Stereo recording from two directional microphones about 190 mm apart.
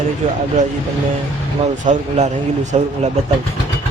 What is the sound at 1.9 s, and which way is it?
Speech, 40° right (ahead or behind).